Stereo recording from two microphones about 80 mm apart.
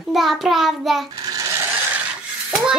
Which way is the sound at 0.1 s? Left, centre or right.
Centre.